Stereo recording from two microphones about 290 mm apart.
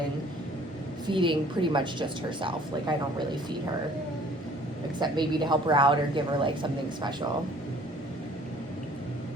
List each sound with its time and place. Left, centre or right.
1.1 s a woman's voice: centre
4.9 s a woman's voice: centre